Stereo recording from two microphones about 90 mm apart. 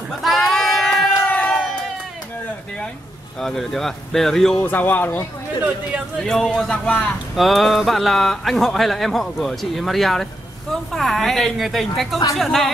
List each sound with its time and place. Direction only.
0.2 s a sound: centre (ahead or behind)
1.3 s crowd: 15° left (ahead or behind)
3.3 s speech: 5° left (ahead or behind)
4.6 s speech: 20° left (ahead or behind)
6.2 s speech: 5° left (ahead or behind)
7.3 s speech: centre (ahead or behind)